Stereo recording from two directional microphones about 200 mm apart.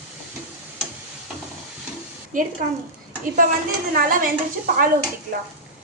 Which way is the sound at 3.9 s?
45° right (ahead or behind).